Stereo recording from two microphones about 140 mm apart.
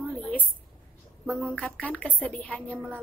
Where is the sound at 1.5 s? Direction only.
10° left (ahead or behind).